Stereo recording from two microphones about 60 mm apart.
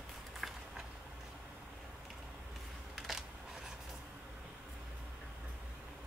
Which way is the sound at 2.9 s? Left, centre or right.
Centre.